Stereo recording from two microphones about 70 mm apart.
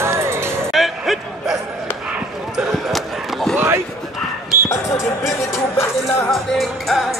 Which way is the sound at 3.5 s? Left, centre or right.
Right.